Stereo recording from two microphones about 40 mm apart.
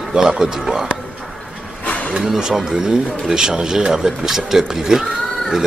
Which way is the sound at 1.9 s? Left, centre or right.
Left.